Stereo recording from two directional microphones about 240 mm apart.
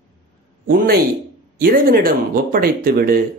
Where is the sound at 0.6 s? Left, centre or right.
Right.